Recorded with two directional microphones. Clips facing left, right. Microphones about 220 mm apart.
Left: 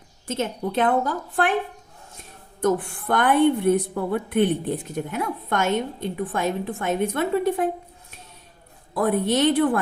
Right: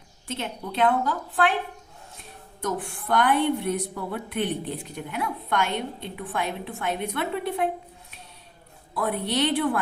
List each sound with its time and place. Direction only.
0.3 s a woman's voice: 45° left (ahead or behind)
2.6 s a woman's voice: 50° left (ahead or behind)
9.0 s a woman's voice: 45° left (ahead or behind)